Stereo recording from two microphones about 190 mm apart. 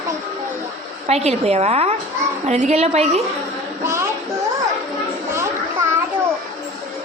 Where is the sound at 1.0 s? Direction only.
35° right (ahead or behind).